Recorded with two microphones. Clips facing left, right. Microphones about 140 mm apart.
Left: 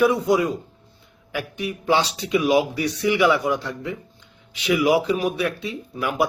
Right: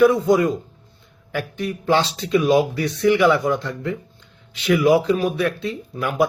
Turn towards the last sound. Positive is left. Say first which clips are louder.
# right 2 dB
turn(degrees=10)  # may be behind; listen again after turning